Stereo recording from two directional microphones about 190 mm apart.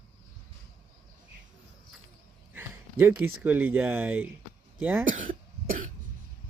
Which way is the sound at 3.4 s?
10° right (ahead or behind).